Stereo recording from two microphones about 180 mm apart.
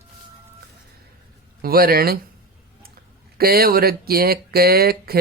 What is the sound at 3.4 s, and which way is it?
Speech, 60° right (ahead or behind).